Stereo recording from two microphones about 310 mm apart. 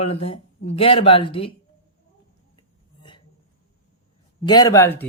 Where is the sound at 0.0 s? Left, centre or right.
Centre.